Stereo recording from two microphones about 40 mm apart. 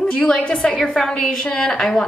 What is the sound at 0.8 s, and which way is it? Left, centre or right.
Speech, centre.